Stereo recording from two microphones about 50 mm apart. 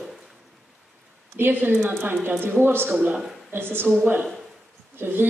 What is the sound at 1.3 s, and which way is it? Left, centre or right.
Speech, right.